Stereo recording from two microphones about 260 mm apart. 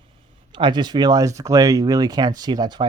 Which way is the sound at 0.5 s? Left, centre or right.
Centre.